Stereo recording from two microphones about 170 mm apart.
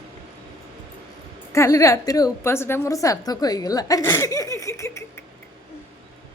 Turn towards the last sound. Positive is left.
turn(degrees=15)  # may be behind; listen again after turning